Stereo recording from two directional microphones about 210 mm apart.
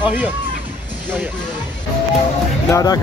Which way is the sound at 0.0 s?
5° right (ahead or behind).